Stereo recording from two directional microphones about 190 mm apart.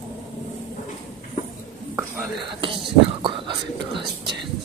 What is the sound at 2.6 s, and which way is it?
Whispering, 25° right (ahead or behind).